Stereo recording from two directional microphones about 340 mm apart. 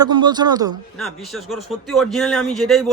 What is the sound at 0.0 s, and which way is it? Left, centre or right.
Speech, centre.